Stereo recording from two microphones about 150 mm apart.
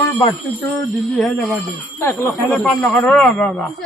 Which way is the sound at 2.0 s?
20° left (ahead or behind).